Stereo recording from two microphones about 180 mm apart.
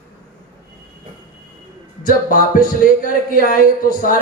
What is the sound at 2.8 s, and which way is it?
A man's voice, 50° left (ahead or behind).